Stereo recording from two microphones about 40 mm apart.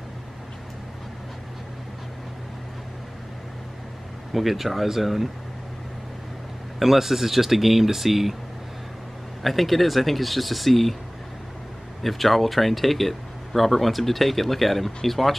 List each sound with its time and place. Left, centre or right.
4.3 s speech: centre
6.8 s speech: centre
9.4 s speech: centre
12.0 s speech: centre